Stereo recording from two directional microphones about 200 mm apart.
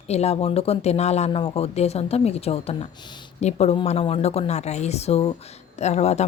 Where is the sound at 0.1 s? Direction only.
30° left (ahead or behind).